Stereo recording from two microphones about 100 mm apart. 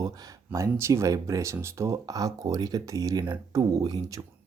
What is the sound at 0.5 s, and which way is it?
Speech, 30° right (ahead or behind).